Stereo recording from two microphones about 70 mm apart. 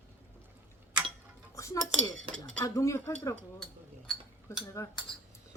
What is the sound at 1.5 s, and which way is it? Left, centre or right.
Cutlery, left.